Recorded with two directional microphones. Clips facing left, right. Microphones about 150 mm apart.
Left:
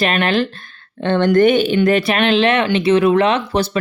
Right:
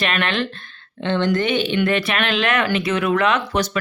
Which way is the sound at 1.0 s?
55° left (ahead or behind).